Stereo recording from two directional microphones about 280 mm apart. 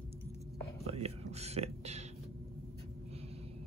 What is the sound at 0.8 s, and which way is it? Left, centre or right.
Speech, right.